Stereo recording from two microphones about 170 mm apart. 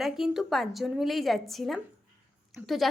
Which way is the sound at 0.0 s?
Centre (ahead or behind).